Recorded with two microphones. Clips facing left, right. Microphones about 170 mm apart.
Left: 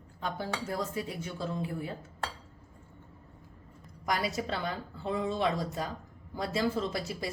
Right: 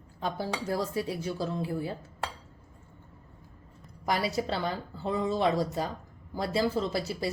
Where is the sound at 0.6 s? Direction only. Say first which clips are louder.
Right 6 dB; 35° right (ahead or behind).